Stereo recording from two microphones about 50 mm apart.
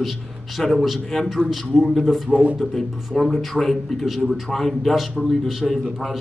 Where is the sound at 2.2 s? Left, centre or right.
Right.